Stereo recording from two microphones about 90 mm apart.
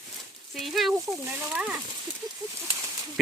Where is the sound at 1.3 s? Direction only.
15° right (ahead or behind).